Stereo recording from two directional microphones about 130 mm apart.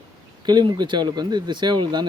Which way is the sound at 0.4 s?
35° right (ahead or behind).